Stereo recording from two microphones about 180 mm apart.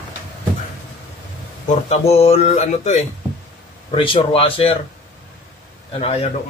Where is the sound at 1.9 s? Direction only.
35° left (ahead or behind).